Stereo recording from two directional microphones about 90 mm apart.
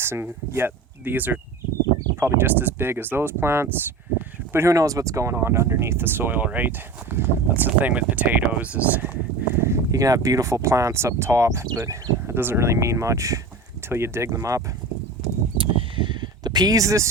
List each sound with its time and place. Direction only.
0.0 s speech: 25° right (ahead or behind)
9.6 s speech: 30° right (ahead or behind)
15.5 s a sound: 75° right (ahead or behind); by 17.1 s 35° right (ahead or behind)